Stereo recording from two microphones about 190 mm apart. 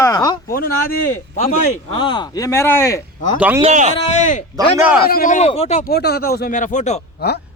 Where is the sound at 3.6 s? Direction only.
40° right (ahead or behind).